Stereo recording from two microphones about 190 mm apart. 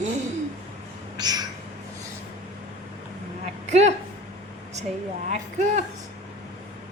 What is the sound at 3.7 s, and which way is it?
Speech, 35° right (ahead or behind).